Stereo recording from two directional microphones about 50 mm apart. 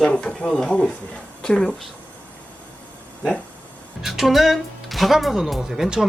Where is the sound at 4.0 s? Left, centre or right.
Centre.